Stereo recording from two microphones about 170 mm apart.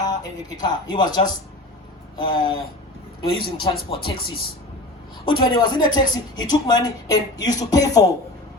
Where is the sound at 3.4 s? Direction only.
30° left (ahead or behind).